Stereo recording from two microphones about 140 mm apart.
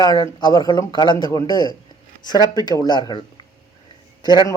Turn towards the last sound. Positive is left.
turn(degrees=30)  # may be behind; listen again after turning